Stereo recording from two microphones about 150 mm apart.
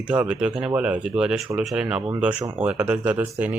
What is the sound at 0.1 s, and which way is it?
Speech, 10° right (ahead or behind).